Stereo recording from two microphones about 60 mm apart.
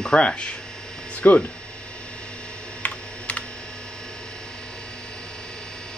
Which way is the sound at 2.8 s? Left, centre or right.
Left.